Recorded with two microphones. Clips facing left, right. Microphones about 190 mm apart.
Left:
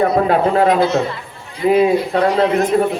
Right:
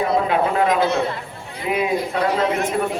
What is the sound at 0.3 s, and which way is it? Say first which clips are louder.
Speech: left 5 dB; 35° left (ahead or behind).